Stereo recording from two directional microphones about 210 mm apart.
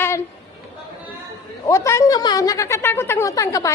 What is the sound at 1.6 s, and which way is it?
A woman's voice, 15° left (ahead or behind).